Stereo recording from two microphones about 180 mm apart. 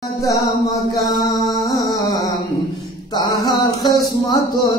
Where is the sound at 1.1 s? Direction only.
20° left (ahead or behind).